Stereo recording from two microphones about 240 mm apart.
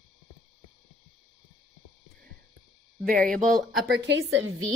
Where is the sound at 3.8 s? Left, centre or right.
Right.